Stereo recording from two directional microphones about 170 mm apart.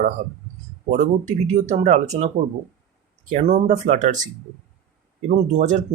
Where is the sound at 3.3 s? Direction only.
40° right (ahead or behind).